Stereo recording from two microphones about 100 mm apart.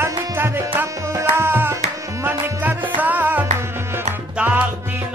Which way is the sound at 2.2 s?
15° right (ahead or behind).